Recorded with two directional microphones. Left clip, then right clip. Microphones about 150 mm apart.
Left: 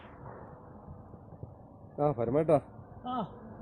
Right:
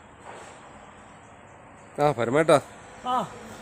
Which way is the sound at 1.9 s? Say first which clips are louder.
Right 7 dB; 60° right (ahead or behind).